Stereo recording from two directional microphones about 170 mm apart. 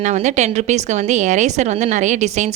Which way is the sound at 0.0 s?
45° right (ahead or behind).